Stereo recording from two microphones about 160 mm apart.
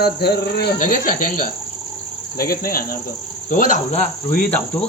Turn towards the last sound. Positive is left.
turn(degrees=5)  # may be behind; listen again after turning